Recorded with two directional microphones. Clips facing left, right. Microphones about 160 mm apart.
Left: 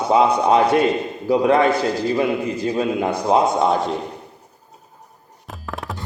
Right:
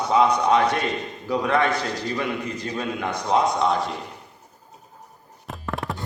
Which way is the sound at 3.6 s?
Centre (ahead or behind).